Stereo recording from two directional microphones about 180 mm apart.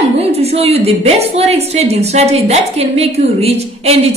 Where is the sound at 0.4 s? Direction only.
35° right (ahead or behind).